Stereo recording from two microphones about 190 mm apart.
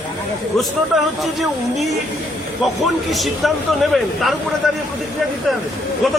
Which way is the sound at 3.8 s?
Centre (ahead or behind).